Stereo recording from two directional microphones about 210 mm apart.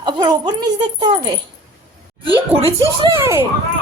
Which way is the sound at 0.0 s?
20° right (ahead or behind).